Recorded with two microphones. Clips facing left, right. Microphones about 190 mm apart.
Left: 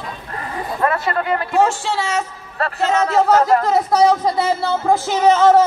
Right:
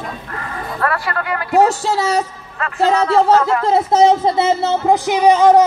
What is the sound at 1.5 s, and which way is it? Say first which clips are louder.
Speech: right 5 dB; 40° right (ahead or behind).